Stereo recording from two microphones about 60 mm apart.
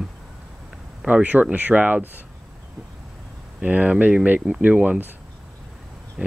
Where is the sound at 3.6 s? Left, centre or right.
Right.